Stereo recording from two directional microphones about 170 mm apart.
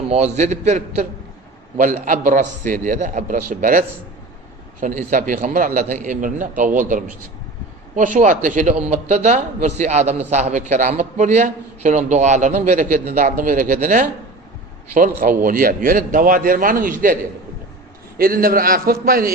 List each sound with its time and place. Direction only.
0.1 s a man's voice: 40° right (ahead or behind)
18.2 s a man's voice: 60° right (ahead or behind)